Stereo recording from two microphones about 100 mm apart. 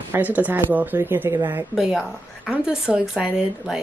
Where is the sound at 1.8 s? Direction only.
Centre (ahead or behind).